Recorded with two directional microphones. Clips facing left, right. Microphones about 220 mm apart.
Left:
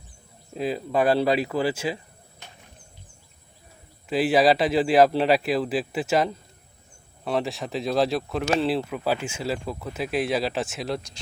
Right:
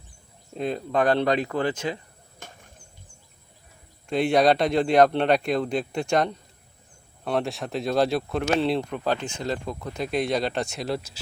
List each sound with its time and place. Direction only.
0.5 s speech: 5° left (ahead or behind)
2.4 s a sound: 45° right (ahead or behind)
4.1 s speech: 5° left (ahead or behind)